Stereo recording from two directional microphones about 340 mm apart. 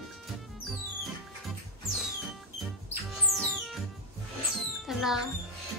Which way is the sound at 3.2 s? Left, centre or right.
Centre.